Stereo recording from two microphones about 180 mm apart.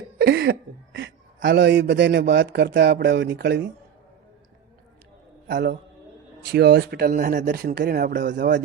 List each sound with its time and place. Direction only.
0.2 s a sound: 65° right (ahead or behind)
0.9 s a man's voice: 85° right; by 3.7 s 65° right (ahead or behind)
6.5 s speech: 65° right (ahead or behind); by 8.5 s 50° right (ahead or behind)